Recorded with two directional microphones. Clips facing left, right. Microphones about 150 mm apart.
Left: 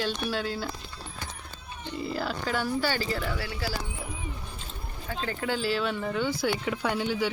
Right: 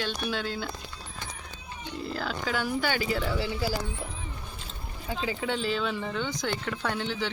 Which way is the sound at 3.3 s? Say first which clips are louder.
Right 4 dB; 20° right (ahead or behind).